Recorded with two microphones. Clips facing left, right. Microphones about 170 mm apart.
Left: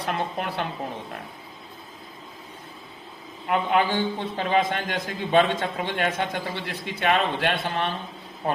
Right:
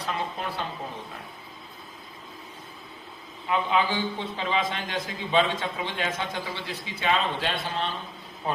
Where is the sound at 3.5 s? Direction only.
55° left (ahead or behind).